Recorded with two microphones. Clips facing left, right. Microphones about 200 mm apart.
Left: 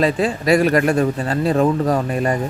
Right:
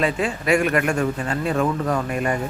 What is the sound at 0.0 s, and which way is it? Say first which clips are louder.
A man's voice: left 5 dB; 35° left (ahead or behind).